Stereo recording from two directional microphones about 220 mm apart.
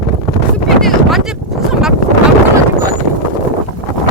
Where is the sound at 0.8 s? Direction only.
Centre (ahead or behind).